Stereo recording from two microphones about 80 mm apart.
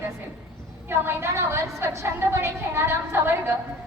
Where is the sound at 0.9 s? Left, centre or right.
Right.